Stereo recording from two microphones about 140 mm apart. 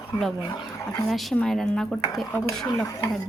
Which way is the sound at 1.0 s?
Centre (ahead or behind).